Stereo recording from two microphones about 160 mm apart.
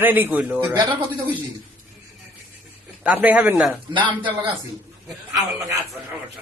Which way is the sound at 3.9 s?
30° right (ahead or behind).